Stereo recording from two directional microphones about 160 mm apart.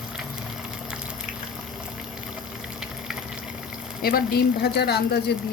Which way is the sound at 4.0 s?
75° left (ahead or behind).